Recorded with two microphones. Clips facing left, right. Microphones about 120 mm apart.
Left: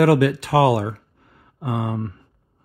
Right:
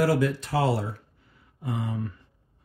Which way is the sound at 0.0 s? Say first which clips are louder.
Left 7 dB; 75° left (ahead or behind).